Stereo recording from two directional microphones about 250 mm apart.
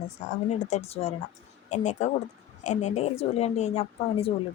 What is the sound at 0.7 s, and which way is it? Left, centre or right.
A woman's voice, left.